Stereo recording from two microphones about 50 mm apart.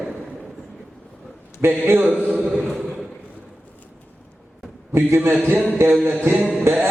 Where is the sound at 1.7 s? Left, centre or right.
Right.